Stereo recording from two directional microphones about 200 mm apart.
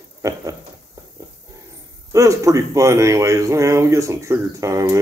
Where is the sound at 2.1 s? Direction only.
15° right (ahead or behind).